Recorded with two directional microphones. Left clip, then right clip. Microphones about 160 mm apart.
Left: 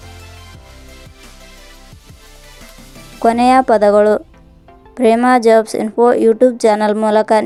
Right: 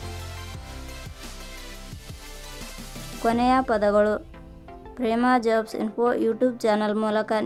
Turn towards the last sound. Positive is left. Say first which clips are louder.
# left 12 dB
turn(degrees=40)  # may be behind; listen again after turning